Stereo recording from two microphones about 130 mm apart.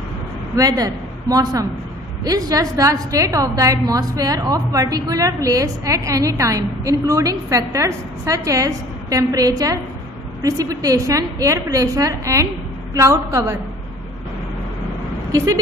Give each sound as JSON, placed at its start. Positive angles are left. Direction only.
{"t": 0.6, "sound": "a woman's voice", "side_deg": -25}
{"t": 15.3, "sound": "a woman's voice", "side_deg": -25}